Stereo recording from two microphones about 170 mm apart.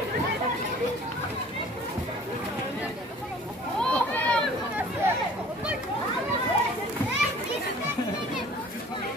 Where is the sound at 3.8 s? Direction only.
10° left (ahead or behind).